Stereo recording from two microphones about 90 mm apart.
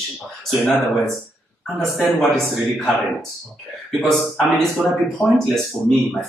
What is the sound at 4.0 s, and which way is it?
Speech, centre (ahead or behind).